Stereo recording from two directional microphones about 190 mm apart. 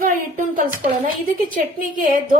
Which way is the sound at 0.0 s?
45° right (ahead or behind).